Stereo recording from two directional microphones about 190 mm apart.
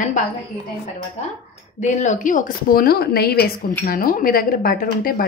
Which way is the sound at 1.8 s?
40° left (ahead or behind).